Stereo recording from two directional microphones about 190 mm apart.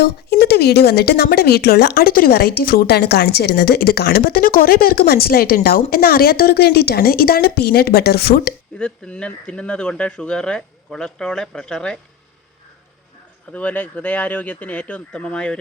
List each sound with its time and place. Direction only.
0.0 s speech: 55° left (ahead or behind)
8.8 s speech: 5° left (ahead or behind)
13.5 s speech: 10° left (ahead or behind)